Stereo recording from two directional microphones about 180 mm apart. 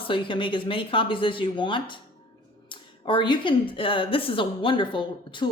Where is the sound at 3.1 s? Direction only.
25° left (ahead or behind).